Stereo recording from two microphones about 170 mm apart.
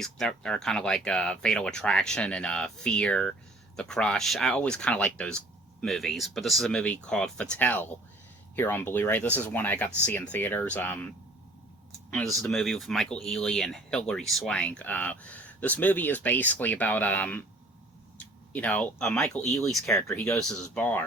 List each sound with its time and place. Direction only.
0.0 s speech: 5° left (ahead or behind)
12.1 s speech: centre (ahead or behind)
18.5 s speech: 10° left (ahead or behind)